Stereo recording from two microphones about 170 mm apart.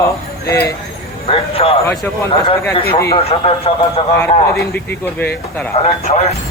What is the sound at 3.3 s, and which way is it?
Speech, 35° left (ahead or behind).